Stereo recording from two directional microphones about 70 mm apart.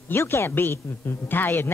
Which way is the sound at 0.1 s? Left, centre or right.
Left.